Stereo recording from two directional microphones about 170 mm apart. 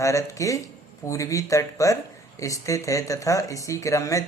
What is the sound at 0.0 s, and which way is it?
A man's voice, 20° left (ahead or behind).